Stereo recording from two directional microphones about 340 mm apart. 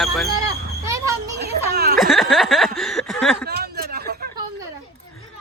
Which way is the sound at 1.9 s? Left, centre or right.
Centre.